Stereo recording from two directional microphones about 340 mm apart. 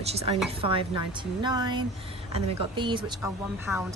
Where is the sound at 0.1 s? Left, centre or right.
Centre.